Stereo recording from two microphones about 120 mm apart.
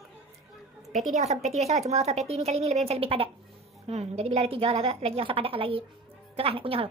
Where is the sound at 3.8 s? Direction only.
65° right (ahead or behind).